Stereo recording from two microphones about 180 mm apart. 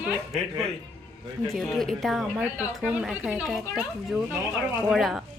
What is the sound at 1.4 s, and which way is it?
A woman's voice, centre (ahead or behind).